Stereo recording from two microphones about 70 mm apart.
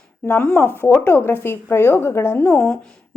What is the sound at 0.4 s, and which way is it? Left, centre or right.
A woman's voice, left.